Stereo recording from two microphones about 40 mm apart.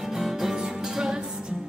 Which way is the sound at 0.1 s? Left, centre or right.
Centre.